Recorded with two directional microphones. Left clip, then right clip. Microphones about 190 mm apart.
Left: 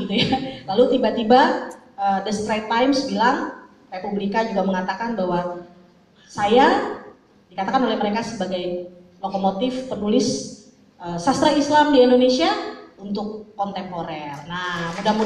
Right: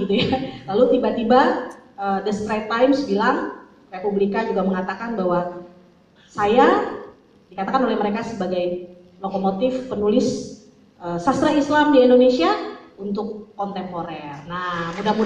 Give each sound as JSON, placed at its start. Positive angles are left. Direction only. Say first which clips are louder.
{"t": 0.1, "sound": "a man's voice", "louder": "left 2 dB", "side_deg": 45}